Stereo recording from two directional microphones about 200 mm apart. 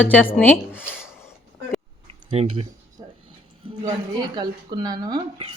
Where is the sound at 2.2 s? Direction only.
30° right (ahead or behind).